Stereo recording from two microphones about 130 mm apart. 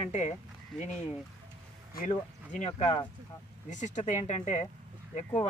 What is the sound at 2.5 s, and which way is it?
Speech, 60° left (ahead or behind).